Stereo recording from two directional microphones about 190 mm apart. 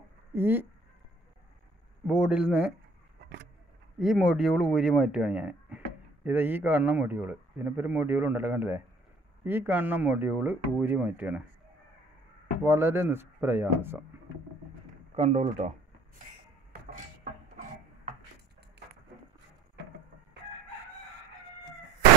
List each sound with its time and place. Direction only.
0.3 s speech: 10° right (ahead or behind)
2.0 s speech: 5° right (ahead or behind)
4.0 s speech: centre (ahead or behind)
12.6 s speech: 15° right (ahead or behind)
15.1 s speech: 35° right (ahead or behind)